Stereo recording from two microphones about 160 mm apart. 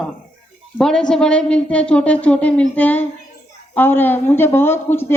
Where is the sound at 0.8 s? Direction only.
5° left (ahead or behind).